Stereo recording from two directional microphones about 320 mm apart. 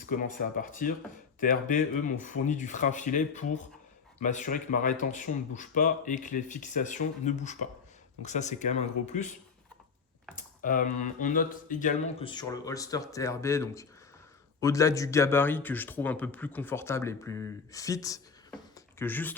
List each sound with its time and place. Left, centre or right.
0.0 s speech: left
10.6 s a man's voice: left; by 19.3 s centre